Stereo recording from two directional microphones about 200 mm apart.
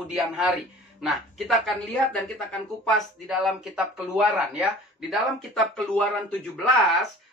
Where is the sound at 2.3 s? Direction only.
Centre (ahead or behind).